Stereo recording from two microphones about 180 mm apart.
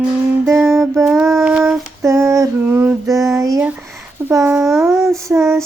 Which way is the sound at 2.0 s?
15° right (ahead or behind).